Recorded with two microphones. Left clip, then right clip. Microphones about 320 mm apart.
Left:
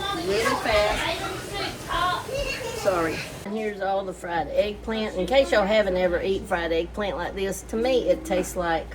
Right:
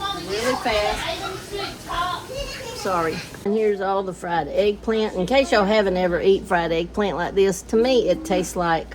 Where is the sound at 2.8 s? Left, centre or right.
Centre.